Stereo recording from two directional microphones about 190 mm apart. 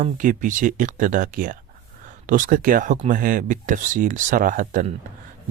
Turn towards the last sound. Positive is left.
turn(degrees=-45)  # may be behind; listen again after turning